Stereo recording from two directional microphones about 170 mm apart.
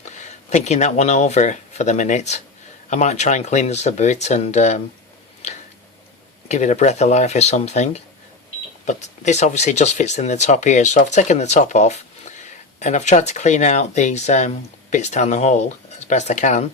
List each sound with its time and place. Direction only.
0.0 s speech: 45° left (ahead or behind)
5.4 s a sound: 40° left (ahead or behind)
6.5 s speech: 40° left (ahead or behind)